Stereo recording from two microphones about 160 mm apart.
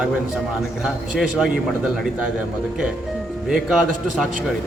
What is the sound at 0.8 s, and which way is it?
A man's voice, 5° right (ahead or behind).